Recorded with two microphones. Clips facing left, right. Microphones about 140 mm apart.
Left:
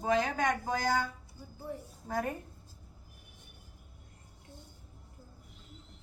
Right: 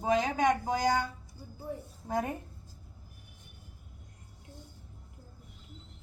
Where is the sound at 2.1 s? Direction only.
20° right (ahead or behind).